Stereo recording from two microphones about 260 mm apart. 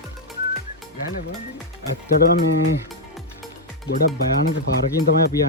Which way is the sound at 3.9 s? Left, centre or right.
Left.